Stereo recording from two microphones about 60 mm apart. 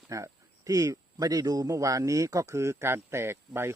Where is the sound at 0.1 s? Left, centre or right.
Right.